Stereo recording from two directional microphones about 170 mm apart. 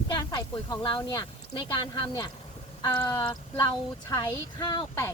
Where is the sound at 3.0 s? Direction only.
20° left (ahead or behind).